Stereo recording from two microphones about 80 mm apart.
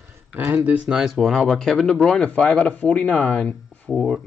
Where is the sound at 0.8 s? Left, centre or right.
Centre.